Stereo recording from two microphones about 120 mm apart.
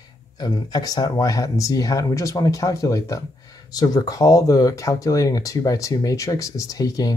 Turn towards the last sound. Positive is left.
turn(degrees=30)  # may be behind; listen again after turning